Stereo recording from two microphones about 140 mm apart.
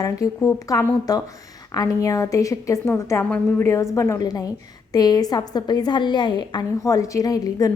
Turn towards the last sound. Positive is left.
turn(degrees=25)  # may be behind; listen again after turning